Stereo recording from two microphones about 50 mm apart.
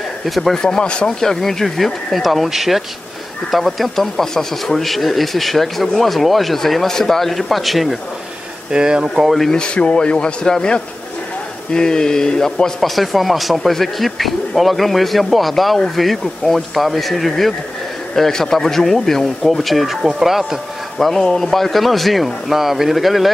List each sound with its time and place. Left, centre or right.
0.2 s a man's voice: centre
8.7 s speech: centre
9.4 s a man's voice: centre
12.9 s a man's voice: centre
21.0 s a man's voice: centre